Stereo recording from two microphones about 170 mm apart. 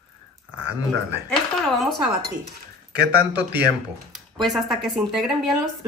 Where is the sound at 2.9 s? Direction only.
70° right (ahead or behind).